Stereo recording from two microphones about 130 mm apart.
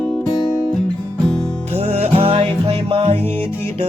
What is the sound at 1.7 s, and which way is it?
Music, 55° right (ahead or behind).